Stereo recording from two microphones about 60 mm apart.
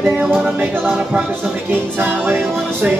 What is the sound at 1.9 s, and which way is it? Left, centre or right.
Music, right.